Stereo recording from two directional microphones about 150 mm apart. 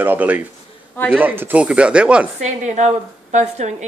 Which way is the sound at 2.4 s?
50° right (ahead or behind).